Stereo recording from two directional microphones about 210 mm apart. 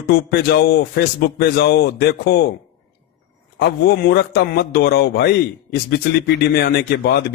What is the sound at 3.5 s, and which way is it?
A man's voice, 50° left (ahead or behind).